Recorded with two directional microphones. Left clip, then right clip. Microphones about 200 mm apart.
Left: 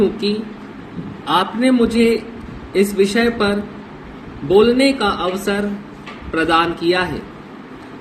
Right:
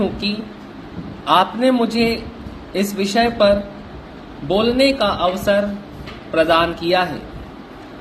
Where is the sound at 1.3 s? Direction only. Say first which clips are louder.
Right 1 dB; 20° right (ahead or behind).